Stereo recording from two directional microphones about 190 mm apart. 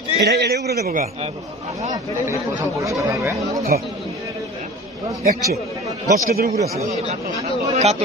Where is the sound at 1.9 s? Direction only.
15° right (ahead or behind).